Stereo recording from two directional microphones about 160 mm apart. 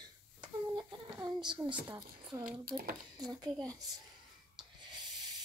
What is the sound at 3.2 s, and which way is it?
Speech, 25° right (ahead or behind).